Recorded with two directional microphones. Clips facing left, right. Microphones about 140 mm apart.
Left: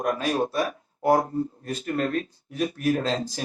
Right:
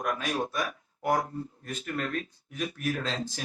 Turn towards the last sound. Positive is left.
turn(degrees=35)  # may be behind; listen again after turning